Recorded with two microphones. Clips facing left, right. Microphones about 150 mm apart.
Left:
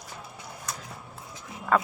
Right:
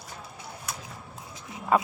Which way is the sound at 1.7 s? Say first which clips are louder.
Right 1 dB; 10° right (ahead or behind).